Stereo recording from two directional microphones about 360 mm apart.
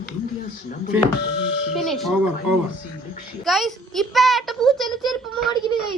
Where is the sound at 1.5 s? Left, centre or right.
Right.